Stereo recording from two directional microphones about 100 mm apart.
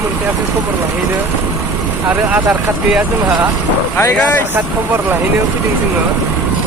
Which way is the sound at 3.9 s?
20° left (ahead or behind).